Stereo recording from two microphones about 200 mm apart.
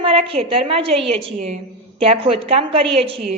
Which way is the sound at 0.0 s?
30° right (ahead or behind).